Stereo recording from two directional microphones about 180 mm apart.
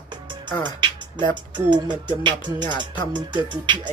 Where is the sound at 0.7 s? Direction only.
25° right (ahead or behind).